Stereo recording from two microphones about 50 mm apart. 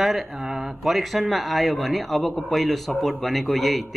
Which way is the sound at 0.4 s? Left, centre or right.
Centre.